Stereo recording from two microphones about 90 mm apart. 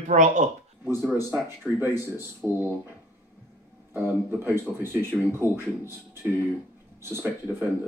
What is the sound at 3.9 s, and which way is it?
Speech, 25° right (ahead or behind).